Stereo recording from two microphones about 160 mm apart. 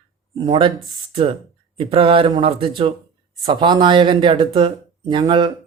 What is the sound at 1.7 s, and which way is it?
Speech, 35° right (ahead or behind).